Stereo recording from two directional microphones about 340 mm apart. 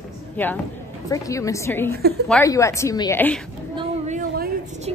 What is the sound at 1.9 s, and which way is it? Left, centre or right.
Speech, right.